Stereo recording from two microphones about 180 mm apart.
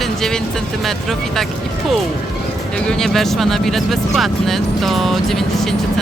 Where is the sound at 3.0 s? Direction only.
Centre (ahead or behind).